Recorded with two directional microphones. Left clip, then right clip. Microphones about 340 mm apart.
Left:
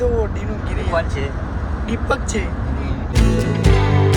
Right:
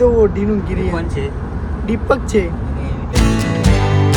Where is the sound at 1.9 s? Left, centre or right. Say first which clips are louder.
Right 6 dB; right.